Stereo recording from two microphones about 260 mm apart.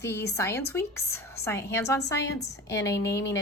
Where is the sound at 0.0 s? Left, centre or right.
Centre.